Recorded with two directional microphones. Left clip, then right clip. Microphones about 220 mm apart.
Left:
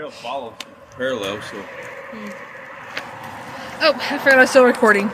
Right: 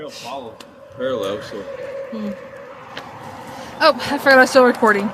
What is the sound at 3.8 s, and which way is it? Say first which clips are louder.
Speech: right 2 dB; 15° right (ahead or behind).